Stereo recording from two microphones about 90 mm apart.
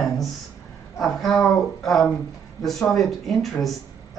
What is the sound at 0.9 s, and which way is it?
A woman's voice, 5° left (ahead or behind).